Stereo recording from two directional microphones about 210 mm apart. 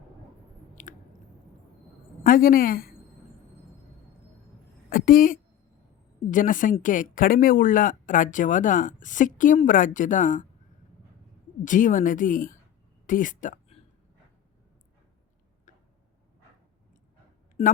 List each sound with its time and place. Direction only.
0.8 s chewing: 40° left (ahead or behind)
2.2 s speech: 40° left (ahead or behind)
4.9 s a woman's voice: 40° left (ahead or behind)
11.6 s speech: 40° left (ahead or behind)
15.7 s tick-tock: 35° left (ahead or behind)
17.6 s speech: 30° left (ahead or behind)